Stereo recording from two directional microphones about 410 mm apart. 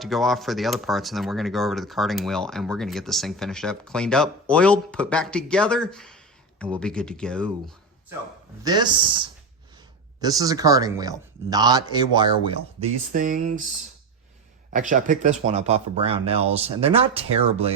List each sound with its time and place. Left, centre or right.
0.0 s speech: centre
8.6 s speech: centre
14.7 s speech: centre